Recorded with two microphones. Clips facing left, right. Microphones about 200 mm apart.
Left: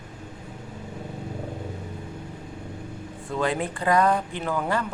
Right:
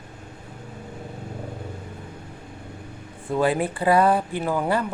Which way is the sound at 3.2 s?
15° right (ahead or behind).